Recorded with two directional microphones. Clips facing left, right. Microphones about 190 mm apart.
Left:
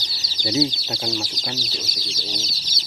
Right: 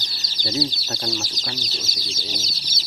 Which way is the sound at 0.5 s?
15° left (ahead or behind).